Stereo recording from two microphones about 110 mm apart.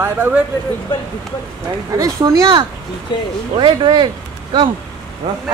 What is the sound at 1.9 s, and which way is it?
Speech, 30° right (ahead or behind).